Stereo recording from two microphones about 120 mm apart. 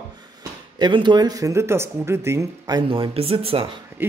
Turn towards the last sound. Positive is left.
turn(degrees=-50)  # may be behind; listen again after turning